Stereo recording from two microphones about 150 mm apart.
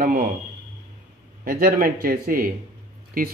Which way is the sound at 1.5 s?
75° right (ahead or behind).